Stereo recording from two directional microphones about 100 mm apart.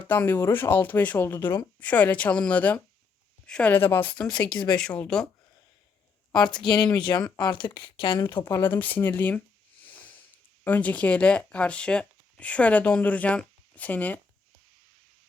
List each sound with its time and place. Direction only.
0.1 s speech: 20° left (ahead or behind)
1.4 s speech: 40° left (ahead or behind)
1.8 s a woman's voice: 15° left (ahead or behind)
4.4 s speech: 45° left (ahead or behind)
4.8 s a woman's voice: 10° left (ahead or behind)
6.3 s speech: 45° left (ahead or behind)
8.4 s speech: 20° left (ahead or behind)
10.6 s speech: 15° left (ahead or behind)